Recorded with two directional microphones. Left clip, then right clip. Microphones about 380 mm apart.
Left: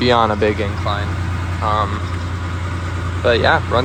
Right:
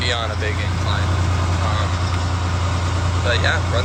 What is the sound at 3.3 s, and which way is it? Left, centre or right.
Speech, centre.